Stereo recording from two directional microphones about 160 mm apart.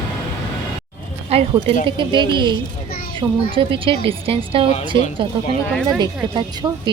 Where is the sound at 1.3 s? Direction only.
40° right (ahead or behind).